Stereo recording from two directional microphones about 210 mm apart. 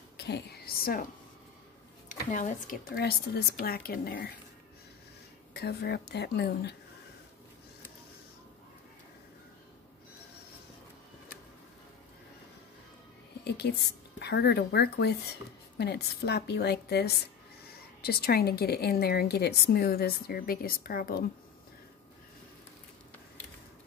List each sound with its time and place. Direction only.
0.2 s a woman's voice: 50° left (ahead or behind)
2.0 s speech: 35° left (ahead or behind)
3.0 s a woman's voice: 50° left (ahead or behind)
5.5 s a woman's voice: 50° left (ahead or behind)
13.4 s a woman's voice: 50° left (ahead or behind)